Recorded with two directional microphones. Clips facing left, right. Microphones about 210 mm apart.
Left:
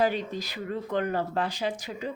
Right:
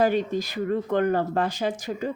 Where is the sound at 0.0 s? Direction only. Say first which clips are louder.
Right 5 dB; 50° right (ahead or behind).